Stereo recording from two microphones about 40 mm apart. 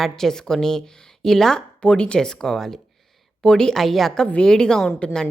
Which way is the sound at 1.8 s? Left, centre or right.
Left.